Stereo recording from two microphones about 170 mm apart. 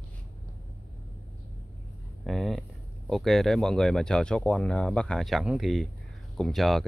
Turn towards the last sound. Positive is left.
turn(degrees=0)  # may be behind; listen again after turning